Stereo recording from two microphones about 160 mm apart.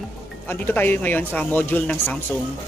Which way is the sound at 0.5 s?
10° left (ahead or behind).